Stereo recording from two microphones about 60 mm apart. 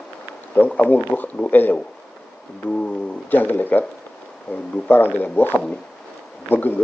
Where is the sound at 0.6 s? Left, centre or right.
Left.